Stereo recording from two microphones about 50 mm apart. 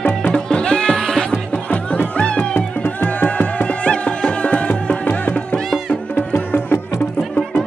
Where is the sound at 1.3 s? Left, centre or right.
Left.